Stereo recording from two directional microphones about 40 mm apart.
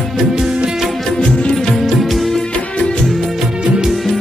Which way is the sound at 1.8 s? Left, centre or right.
Centre.